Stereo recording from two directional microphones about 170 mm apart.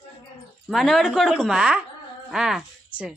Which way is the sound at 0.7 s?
Centre (ahead or behind).